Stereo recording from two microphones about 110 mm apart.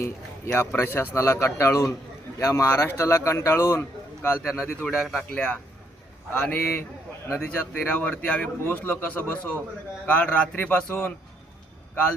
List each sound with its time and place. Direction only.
0.0 s a man's voice: 20° left (ahead or behind)
4.4 s a man's voice: 5° right (ahead or behind)
5.3 s speech: 10° left (ahead or behind)